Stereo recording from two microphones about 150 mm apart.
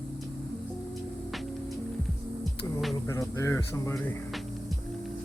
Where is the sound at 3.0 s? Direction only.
20° left (ahead or behind).